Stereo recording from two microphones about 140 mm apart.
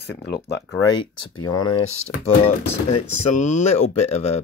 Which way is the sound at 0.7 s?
25° left (ahead or behind).